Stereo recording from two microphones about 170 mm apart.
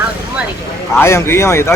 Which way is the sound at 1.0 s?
15° left (ahead or behind).